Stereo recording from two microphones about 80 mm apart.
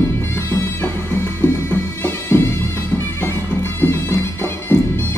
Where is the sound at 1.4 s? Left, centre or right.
Left.